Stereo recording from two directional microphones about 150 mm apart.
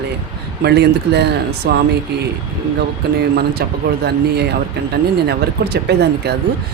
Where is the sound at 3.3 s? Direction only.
90° right.